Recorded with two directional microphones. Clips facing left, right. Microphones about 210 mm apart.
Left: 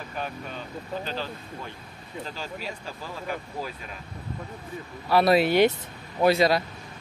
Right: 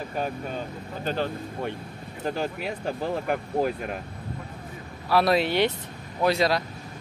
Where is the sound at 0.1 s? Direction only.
40° right (ahead or behind).